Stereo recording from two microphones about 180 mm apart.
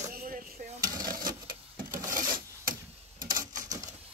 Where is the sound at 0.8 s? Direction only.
20° right (ahead or behind).